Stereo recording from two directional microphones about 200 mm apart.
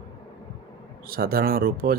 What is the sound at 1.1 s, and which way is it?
Speech, 50° right (ahead or behind).